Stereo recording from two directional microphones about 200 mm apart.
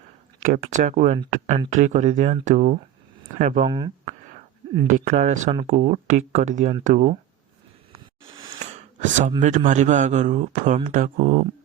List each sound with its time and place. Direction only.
0.4 s a man's voice: 40° right (ahead or behind)
3.7 s speech: 20° right (ahead or behind)
4.9 s a man's voice: 40° right (ahead or behind)
8.3 s a sound: 25° right (ahead or behind)
9.0 s a man's voice: 40° right (ahead or behind)